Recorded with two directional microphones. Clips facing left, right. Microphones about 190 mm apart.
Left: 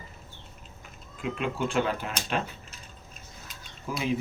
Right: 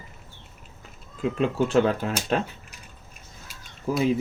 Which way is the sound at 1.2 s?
40° right (ahead or behind).